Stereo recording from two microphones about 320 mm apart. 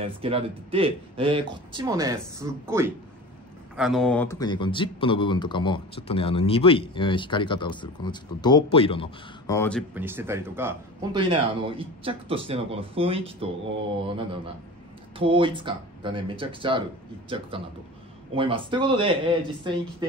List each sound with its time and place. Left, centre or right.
0.0 s speech: centre
15.1 s speech: centre